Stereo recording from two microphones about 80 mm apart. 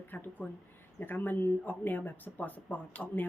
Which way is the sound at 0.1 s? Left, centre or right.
Left.